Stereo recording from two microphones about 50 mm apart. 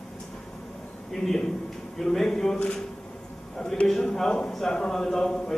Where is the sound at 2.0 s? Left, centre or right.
Centre.